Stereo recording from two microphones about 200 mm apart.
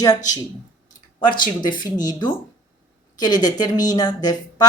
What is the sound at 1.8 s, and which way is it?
A woman's voice, 20° left (ahead or behind).